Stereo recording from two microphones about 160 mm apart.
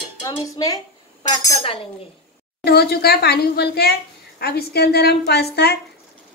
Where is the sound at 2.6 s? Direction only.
85° left.